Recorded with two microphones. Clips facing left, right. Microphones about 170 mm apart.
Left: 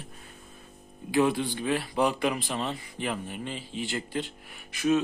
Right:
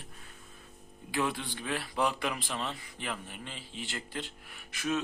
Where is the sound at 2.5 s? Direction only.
25° left (ahead or behind).